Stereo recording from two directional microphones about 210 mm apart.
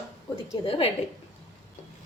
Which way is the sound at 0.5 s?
25° left (ahead or behind).